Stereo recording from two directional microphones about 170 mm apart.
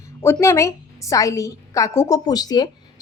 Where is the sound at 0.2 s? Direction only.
15° left (ahead or behind).